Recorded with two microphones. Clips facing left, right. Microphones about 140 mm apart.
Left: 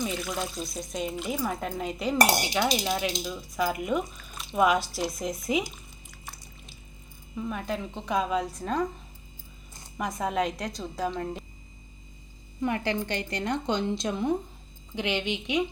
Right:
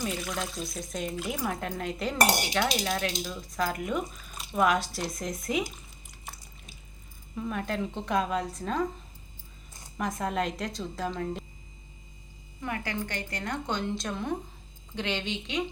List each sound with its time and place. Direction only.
0.0 s speech: 5° right (ahead or behind)
7.3 s speech: centre (ahead or behind)
10.0 s speech: centre (ahead or behind)
12.6 s a woman's voice: 25° left (ahead or behind)